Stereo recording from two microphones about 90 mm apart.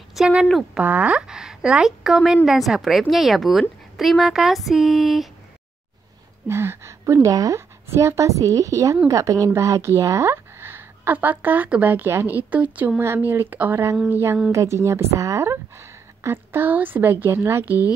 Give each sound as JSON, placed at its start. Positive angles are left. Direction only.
{"t": 0.1, "sound": "a woman's voice", "side_deg": -10}
{"t": 6.4, "sound": "a woman's voice", "side_deg": -30}